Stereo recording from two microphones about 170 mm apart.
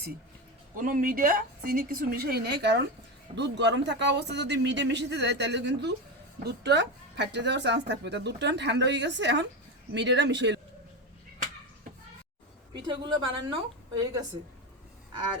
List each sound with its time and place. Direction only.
0.8 s a woman's voice: 50° right (ahead or behind); by 2.8 s 80° right
3.3 s speech: 90° right
6.4 s speech: 80° right
12.9 s a woman's voice: 25° right (ahead or behind)